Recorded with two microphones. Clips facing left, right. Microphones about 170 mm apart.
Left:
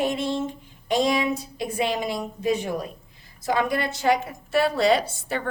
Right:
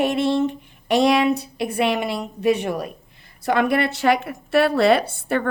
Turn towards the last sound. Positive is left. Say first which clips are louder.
# right 6 dB
turn(degrees=-55)  # may be behind; listen again after turning